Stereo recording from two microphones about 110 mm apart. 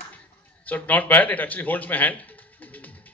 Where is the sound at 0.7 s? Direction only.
15° left (ahead or behind).